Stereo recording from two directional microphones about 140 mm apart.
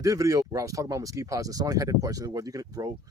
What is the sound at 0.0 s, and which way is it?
Speech, 25° right (ahead or behind).